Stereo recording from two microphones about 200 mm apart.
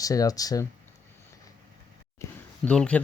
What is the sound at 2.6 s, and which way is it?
Speech, 5° left (ahead or behind).